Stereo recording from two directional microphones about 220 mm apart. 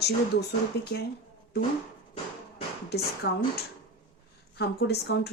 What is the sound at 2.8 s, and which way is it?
Speech, 45° left (ahead or behind).